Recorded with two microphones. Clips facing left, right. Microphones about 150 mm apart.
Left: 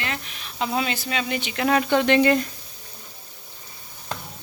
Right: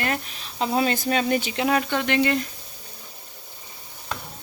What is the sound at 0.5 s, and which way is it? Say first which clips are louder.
Speech: right 3 dB; 30° right (ahead or behind).